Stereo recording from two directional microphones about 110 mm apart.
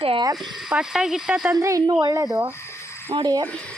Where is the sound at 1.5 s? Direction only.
30° right (ahead or behind).